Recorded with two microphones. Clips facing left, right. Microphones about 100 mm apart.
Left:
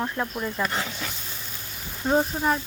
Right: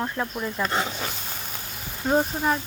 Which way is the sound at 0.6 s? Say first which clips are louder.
Right 3 dB; 30° right (ahead or behind).